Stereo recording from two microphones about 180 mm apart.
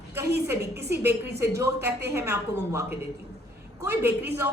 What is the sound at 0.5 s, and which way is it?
Speech, 65° right (ahead or behind).